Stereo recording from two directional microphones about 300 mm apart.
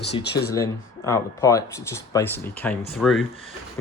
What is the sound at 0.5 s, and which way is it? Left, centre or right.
Speech, centre.